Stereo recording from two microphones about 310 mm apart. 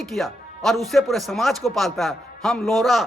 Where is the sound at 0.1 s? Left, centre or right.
Centre.